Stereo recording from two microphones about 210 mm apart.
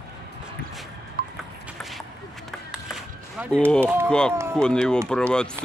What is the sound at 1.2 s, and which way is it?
Vehicle, 45° right (ahead or behind).